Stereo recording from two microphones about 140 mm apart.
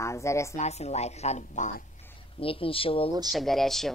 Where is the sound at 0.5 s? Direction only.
50° left (ahead or behind).